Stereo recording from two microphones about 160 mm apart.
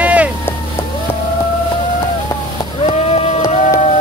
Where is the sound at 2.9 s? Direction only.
40° left (ahead or behind).